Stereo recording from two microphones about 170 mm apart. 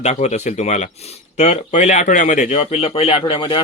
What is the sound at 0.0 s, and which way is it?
Speech, 40° left (ahead or behind).